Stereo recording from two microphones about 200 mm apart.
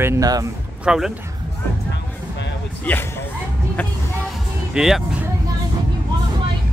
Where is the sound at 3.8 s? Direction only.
10° left (ahead or behind).